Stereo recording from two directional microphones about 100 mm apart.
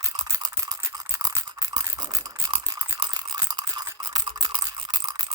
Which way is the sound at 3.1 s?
45° right (ahead or behind).